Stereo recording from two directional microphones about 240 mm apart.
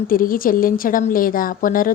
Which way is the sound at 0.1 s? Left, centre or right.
Left.